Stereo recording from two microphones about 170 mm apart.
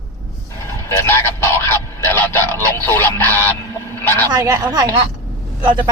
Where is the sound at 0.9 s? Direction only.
15° left (ahead or behind).